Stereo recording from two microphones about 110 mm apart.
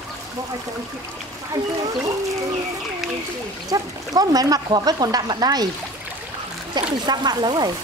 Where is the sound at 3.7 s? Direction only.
35° right (ahead or behind).